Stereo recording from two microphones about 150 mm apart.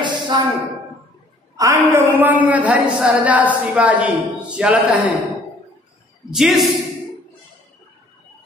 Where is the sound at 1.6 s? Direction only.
20° right (ahead or behind).